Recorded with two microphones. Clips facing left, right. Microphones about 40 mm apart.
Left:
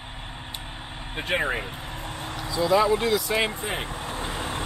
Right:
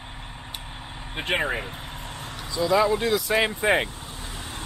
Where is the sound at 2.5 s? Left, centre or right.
Centre.